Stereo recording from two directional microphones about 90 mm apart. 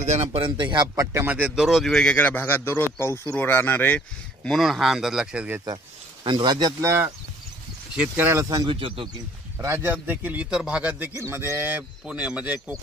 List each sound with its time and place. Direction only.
0.3 s speech: 65° right (ahead or behind)
0.9 s speech: 25° right (ahead or behind)
1.5 s speech: 5° right (ahead or behind); by 4.0 s 20° left (ahead or behind)
4.5 s speech: centre (ahead or behind)
6.2 s speech: 55° right (ahead or behind)
6.8 s speech: 30° right (ahead or behind)
8.2 s speech: 25° right (ahead or behind)
8.6 s speech: 80° right
9.6 s a man's voice: 30° right (ahead or behind)
10.0 s a man's voice: 20° right (ahead or behind)
11.1 s a man's voice: 30° right (ahead or behind)
11.5 s a man's voice: 20° right (ahead or behind)